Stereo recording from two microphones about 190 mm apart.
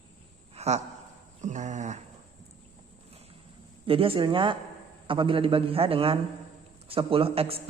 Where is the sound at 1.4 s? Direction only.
40° right (ahead or behind).